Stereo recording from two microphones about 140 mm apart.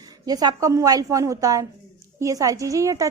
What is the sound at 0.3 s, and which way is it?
A woman's voice, 25° right (ahead or behind).